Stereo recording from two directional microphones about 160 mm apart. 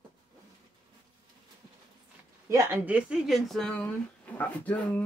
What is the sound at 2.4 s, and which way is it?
Speech, 15° right (ahead or behind).